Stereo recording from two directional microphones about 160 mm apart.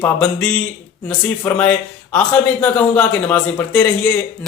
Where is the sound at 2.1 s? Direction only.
10° left (ahead or behind).